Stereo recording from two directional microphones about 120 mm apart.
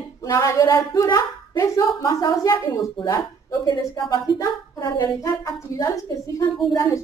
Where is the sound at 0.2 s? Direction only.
30° left (ahead or behind).